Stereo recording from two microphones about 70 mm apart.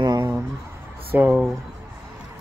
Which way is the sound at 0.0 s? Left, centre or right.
Right.